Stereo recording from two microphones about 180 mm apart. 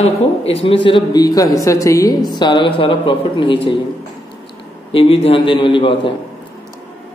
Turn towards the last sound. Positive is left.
turn(degrees=30)  # may be behind; listen again after turning